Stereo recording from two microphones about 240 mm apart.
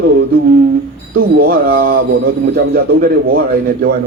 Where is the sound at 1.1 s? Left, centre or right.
Right.